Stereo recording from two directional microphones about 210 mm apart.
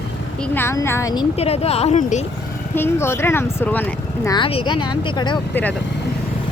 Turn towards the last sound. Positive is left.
turn(degrees=20)  # may be behind; listen again after turning